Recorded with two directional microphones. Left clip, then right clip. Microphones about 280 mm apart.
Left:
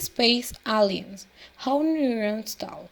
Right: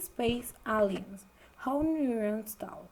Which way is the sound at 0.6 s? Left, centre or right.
Left.